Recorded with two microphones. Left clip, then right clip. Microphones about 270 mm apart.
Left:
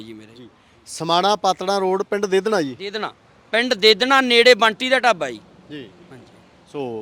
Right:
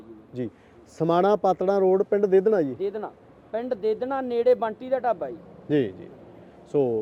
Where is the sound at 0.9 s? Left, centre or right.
Left.